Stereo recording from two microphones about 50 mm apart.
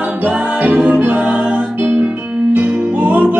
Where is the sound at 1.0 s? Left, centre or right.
Right.